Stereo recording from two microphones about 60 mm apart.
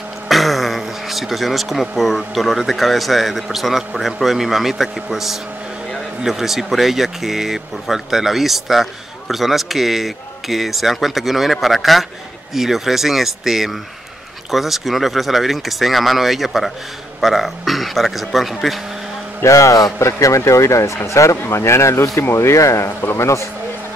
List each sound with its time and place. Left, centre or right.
0.3 s speech: centre
19.4 s a man's voice: left